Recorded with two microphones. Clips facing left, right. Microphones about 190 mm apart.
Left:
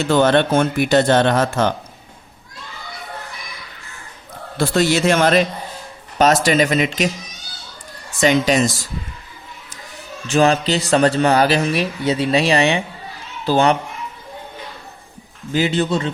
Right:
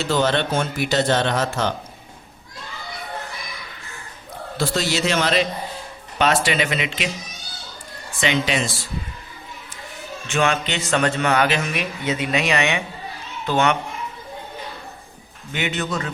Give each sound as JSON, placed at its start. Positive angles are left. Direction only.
{"t": 0.1, "sound": "speech", "side_deg": 55}
{"t": 4.5, "sound": "speech", "side_deg": 55}
{"t": 8.2, "sound": "speech", "side_deg": 45}
{"t": 10.2, "sound": "a man's voice", "side_deg": 35}
{"t": 15.5, "sound": "a man's voice", "side_deg": 30}